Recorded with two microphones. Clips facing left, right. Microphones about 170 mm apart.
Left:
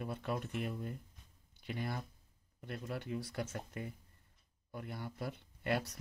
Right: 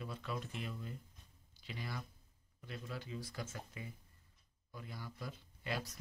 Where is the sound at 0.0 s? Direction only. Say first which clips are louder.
Left 5 dB; 55° left (ahead or behind).